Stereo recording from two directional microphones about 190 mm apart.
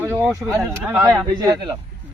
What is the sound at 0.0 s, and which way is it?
Speech, 10° right (ahead or behind).